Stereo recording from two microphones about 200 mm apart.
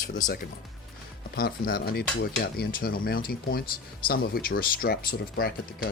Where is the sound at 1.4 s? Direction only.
45° left (ahead or behind).